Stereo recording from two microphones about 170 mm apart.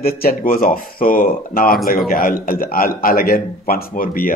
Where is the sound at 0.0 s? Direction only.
60° left (ahead or behind).